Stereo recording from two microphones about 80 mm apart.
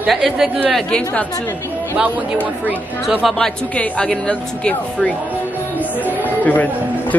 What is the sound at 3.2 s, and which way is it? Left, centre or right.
Speech, centre.